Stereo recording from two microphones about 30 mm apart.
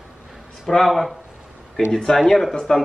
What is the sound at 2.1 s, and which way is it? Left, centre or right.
Speech, centre.